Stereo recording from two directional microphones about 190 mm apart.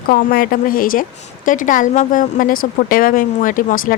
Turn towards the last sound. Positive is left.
turn(degrees=45)  # may be behind; listen again after turning